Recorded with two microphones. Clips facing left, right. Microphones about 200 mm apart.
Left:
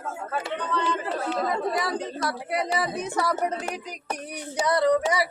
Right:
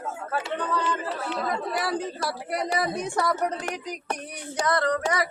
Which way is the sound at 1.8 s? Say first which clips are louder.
Even; 5° right (ahead or behind).